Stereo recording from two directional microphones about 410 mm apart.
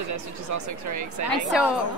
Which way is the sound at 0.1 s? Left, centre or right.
Right.